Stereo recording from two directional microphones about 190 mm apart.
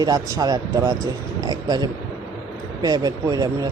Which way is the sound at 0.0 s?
20° right (ahead or behind).